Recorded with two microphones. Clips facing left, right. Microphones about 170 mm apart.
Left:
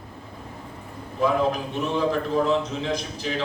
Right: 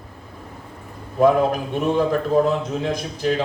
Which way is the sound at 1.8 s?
50° right (ahead or behind).